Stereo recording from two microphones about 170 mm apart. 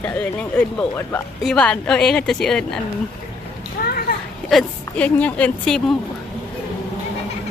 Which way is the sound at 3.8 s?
65° left (ahead or behind).